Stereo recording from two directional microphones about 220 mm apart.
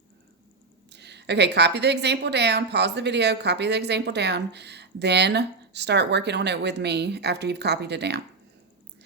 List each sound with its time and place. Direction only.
0.9 s a woman's voice: 50° right (ahead or behind)